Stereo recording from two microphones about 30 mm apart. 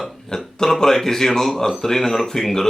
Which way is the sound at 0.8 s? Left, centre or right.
Centre.